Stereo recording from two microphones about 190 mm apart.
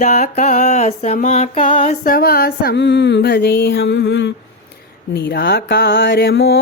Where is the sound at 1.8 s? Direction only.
45° left (ahead or behind).